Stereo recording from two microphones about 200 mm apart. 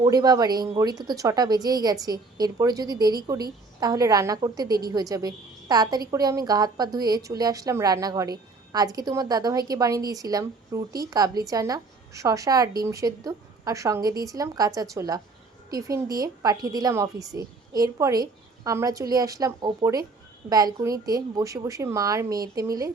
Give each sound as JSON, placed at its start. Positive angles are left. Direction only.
{"t": 0.0, "sound": "a woman's voice", "side_deg": -20}